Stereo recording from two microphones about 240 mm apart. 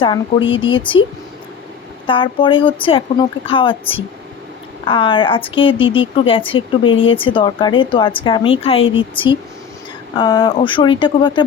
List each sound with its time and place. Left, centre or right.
0.0 s speech: left
2.0 s speech: left